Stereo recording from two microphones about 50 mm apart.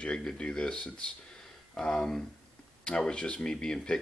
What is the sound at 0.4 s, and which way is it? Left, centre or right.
Speech, centre.